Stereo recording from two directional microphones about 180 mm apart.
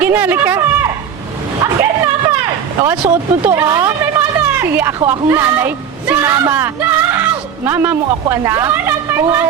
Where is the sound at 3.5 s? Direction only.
20° right (ahead or behind).